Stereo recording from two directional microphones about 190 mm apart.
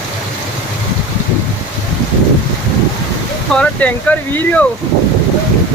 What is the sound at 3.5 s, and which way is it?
Speech, 5° left (ahead or behind).